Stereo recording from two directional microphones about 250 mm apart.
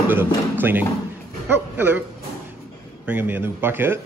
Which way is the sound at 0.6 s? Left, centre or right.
Centre.